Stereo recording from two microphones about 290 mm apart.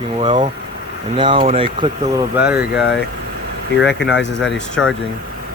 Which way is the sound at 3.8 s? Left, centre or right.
Left.